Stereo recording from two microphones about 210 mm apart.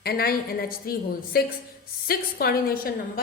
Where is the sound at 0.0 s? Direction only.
45° left (ahead or behind).